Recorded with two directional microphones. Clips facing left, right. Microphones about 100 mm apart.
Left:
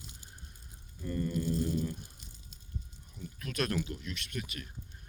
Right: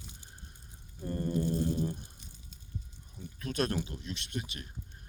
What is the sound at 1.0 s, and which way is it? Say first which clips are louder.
Speech: right 2 dB; 35° right (ahead or behind).